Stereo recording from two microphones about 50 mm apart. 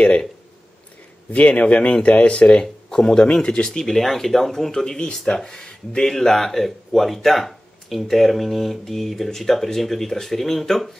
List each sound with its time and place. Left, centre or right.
1.3 s a man's voice: left
2.6 s speech: centre